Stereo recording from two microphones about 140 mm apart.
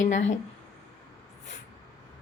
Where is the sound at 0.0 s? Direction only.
60° left (ahead or behind).